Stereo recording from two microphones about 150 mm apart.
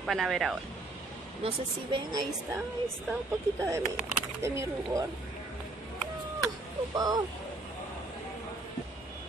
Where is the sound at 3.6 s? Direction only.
20° right (ahead or behind).